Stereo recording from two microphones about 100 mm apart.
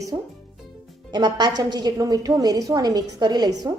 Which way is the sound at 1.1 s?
45° right (ahead or behind).